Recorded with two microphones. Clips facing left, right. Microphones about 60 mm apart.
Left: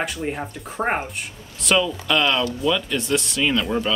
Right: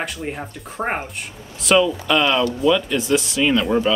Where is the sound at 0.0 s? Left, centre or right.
Centre.